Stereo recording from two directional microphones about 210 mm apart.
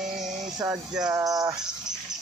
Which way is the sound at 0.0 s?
Centre (ahead or behind).